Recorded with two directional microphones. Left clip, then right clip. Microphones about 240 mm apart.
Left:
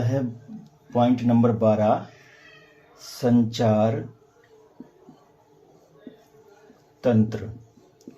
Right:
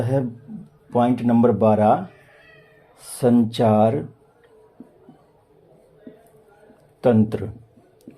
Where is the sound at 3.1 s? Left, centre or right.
Right.